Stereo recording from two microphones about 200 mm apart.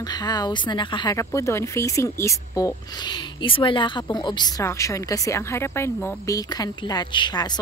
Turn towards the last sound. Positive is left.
turn(degrees=20)  # may be behind; listen again after turning